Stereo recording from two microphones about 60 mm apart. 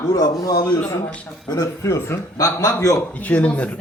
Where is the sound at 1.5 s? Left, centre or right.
Left.